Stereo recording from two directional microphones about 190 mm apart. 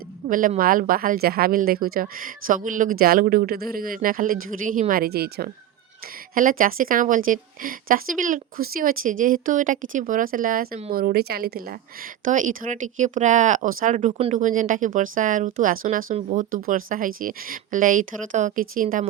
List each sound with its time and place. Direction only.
0.3 s a woman's voice: 45° right (ahead or behind)
12.2 s a woman's voice: 40° right (ahead or behind)